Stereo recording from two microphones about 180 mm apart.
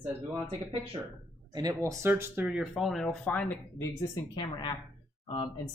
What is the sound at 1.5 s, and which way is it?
Speech, 20° right (ahead or behind).